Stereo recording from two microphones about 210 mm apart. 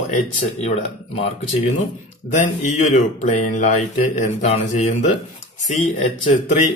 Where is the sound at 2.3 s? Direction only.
35° left (ahead or behind).